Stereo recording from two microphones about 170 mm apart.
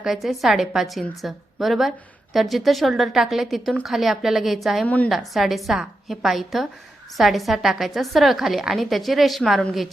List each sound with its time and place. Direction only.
0.0 s a woman's voice: centre (ahead or behind)